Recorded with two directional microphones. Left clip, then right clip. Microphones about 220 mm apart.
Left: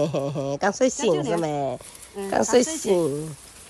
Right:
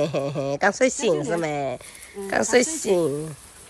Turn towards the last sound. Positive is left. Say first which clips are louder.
# right 1 dB
turn(degrees=0)  # may be behind; listen again after turning